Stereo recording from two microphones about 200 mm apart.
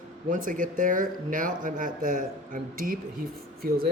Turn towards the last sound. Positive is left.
turn(degrees=-50)  # may be behind; listen again after turning